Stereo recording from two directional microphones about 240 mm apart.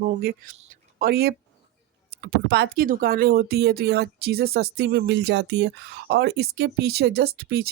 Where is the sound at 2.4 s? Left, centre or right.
Right.